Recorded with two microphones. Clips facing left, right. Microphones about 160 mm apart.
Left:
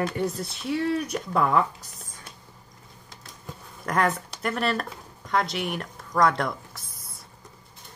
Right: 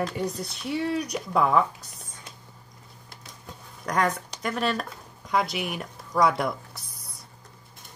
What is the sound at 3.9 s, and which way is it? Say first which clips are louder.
Speech: left 1 dB; 5° left (ahead or behind).